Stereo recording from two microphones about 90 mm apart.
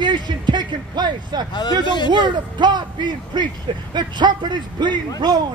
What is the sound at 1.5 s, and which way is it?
Speech, 55° left (ahead or behind).